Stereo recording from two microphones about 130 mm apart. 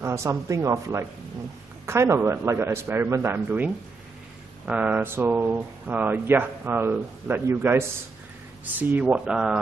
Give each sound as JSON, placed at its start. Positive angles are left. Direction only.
{"t": 0.0, "sound": "speech", "side_deg": -20}